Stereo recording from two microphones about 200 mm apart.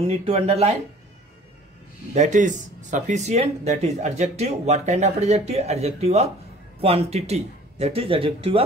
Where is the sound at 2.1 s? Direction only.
40° right (ahead or behind).